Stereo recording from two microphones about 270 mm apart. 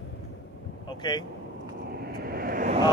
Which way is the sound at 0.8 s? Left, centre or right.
Centre.